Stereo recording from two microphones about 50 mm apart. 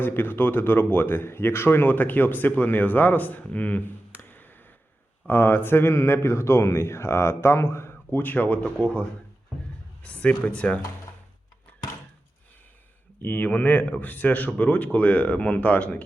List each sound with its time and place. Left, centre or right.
0.0 s speech: left
5.3 s speech: left
8.2 s speech: left
13.2 s speech: left